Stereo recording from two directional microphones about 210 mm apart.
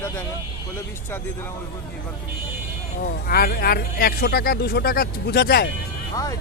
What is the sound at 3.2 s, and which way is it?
Speech, 45° left (ahead or behind).